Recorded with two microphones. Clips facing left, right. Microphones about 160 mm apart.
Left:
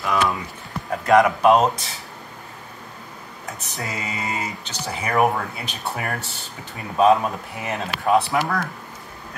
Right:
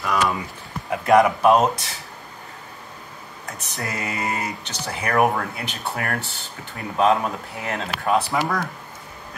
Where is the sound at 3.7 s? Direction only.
20° left (ahead or behind).